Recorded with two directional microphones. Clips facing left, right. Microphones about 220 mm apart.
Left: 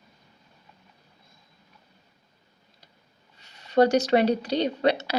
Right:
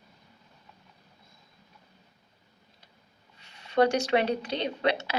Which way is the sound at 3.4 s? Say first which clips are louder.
Left 3 dB; 40° left (ahead or behind).